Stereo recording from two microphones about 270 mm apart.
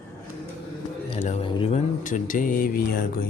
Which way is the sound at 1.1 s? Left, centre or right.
Left.